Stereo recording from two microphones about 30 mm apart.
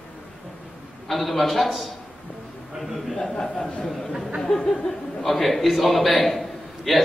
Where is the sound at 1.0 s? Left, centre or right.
Centre.